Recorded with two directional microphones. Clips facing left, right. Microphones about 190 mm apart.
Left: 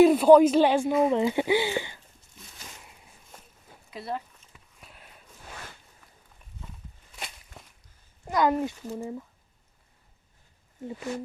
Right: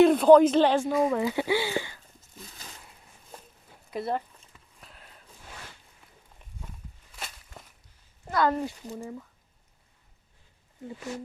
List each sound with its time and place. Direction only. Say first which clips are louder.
0.0 s speech: left 1 dB; 5° left (ahead or behind)
1.0 s speech: left 2 dB; 25° left (ahead or behind)
3.9 s speech: right 4 dB; 50° right (ahead or behind)
4.5 s a sound: left 2 dB; 10° left (ahead or behind)
8.3 s speech: left 2 dB; 15° left (ahead or behind)
11.1 s speech: left 3 dB; 60° left (ahead or behind)